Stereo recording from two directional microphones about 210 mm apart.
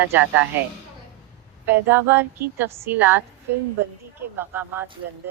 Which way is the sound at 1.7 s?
10° right (ahead or behind).